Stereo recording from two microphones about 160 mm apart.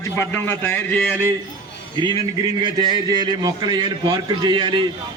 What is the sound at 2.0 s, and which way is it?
A man's voice, 30° right (ahead or behind).